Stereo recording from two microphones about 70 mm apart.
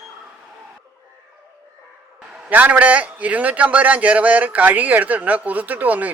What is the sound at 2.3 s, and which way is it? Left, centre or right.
A man's voice, centre.